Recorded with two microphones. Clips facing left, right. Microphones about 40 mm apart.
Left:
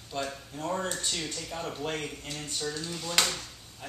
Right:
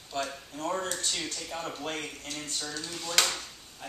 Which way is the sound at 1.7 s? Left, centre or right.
Centre.